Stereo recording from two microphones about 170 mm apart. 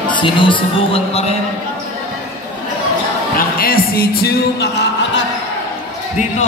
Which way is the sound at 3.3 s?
60° left (ahead or behind).